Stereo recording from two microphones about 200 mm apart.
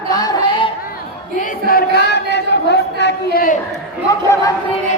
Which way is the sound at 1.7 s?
50° left (ahead or behind).